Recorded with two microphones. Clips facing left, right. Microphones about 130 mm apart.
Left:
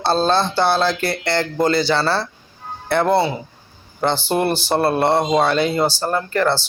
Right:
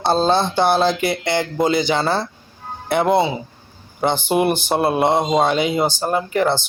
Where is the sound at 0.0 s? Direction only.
15° right (ahead or behind).